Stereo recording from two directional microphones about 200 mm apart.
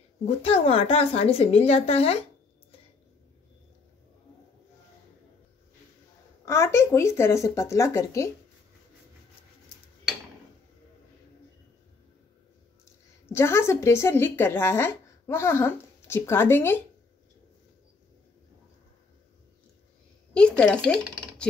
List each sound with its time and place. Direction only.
0.2 s a woman's voice: 30° left (ahead or behind)
6.4 s speech: 15° left (ahead or behind)
13.3 s speech: 10° left (ahead or behind)
20.3 s speech: 5° left (ahead or behind)